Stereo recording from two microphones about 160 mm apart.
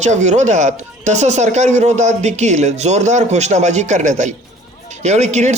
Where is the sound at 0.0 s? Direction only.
50° right (ahead or behind).